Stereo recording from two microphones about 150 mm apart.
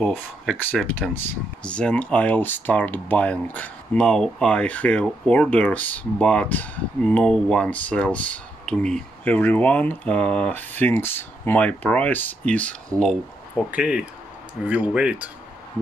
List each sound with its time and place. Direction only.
0.0 s speech: 5° left (ahead or behind)
13.7 s speech: 10° right (ahead or behind)